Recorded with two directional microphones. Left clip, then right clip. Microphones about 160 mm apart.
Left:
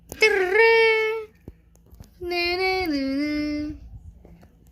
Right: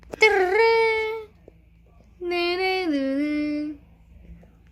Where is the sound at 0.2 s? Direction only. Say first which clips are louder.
Even; 10° right (ahead or behind).